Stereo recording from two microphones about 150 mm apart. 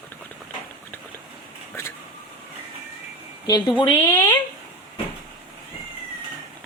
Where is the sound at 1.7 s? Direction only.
15° left (ahead or behind).